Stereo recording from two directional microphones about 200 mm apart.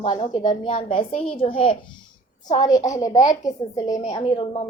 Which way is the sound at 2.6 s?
15° left (ahead or behind).